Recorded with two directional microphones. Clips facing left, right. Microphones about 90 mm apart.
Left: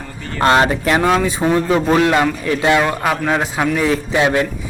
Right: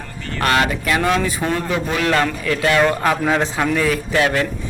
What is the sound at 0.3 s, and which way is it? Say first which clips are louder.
Speech: left 5 dB; 25° left (ahead or behind).